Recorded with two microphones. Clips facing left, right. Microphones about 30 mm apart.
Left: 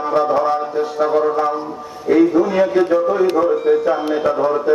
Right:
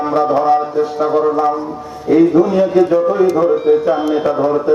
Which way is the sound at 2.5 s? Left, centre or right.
Centre.